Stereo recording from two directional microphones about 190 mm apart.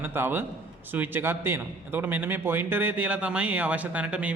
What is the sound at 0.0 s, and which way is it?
A man's voice, 10° right (ahead or behind).